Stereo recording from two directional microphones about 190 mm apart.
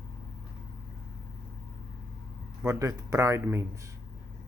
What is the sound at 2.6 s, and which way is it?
Speech, 15° right (ahead or behind).